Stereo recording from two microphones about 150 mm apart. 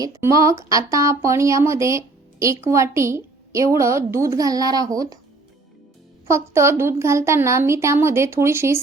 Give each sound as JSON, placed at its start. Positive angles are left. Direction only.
{"t": 0.0, "sound": "speech", "side_deg": -20}
{"t": 6.2, "sound": "a woman's voice", "side_deg": -20}